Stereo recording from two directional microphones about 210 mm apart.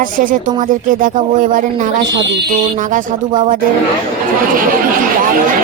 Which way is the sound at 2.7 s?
40° right (ahead or behind).